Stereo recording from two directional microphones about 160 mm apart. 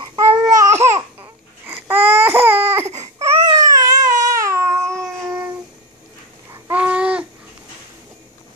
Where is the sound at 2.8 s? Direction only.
45° right (ahead or behind).